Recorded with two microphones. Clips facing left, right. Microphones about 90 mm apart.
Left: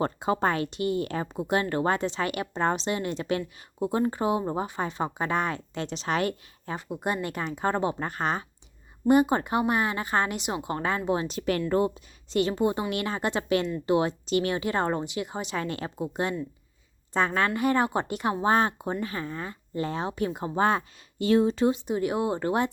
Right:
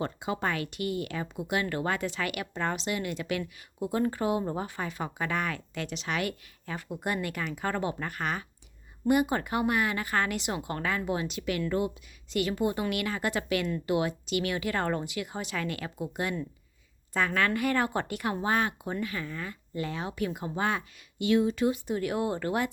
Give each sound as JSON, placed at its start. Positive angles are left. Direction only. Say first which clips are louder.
{"t": 0.0, "sound": "speech", "louder": "left 6 dB", "side_deg": 40}